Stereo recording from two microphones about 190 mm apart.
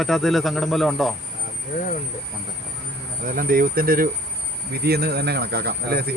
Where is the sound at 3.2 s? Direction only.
50° right (ahead or behind).